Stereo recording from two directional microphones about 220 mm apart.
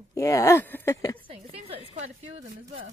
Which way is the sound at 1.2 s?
25° right (ahead or behind).